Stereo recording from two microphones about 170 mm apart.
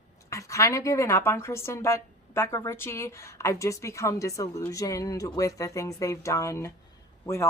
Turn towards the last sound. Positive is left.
turn(degrees=15)  # may be behind; listen again after turning